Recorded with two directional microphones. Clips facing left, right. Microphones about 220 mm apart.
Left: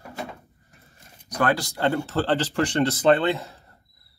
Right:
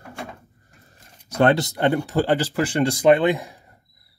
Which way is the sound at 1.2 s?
25° right (ahead or behind).